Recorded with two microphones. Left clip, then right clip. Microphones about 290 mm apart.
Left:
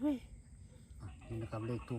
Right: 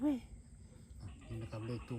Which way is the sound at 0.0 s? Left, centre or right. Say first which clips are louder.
Even; right.